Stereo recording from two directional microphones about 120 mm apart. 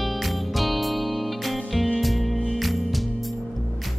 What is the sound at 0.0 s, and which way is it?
Music, centre (ahead or behind).